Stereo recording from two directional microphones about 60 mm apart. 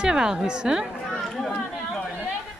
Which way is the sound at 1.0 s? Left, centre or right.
Centre.